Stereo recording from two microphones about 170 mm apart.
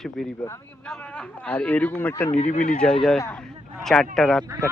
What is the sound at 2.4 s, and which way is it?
Speech, 45° left (ahead or behind).